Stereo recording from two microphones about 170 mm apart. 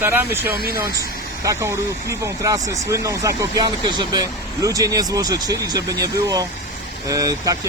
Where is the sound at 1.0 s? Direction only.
20° right (ahead or behind).